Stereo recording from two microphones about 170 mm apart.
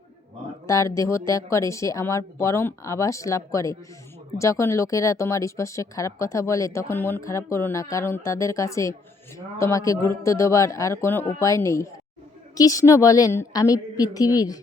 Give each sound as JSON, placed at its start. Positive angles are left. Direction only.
{"t": 0.7, "sound": "a woman's voice", "side_deg": 20}